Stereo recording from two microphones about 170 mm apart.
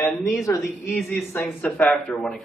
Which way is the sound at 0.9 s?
Centre (ahead or behind).